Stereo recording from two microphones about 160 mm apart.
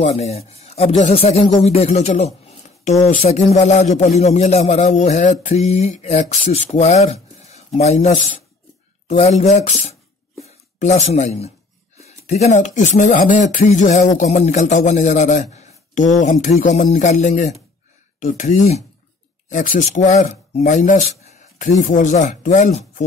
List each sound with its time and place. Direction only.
0.0 s speech: 45° left (ahead or behind)